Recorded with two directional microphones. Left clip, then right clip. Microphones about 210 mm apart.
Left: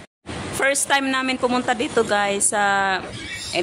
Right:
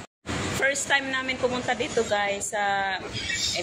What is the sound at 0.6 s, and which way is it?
A woman's voice, 25° left (ahead or behind).